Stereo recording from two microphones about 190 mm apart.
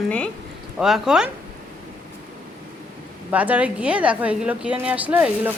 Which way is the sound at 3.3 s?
5° right (ahead or behind).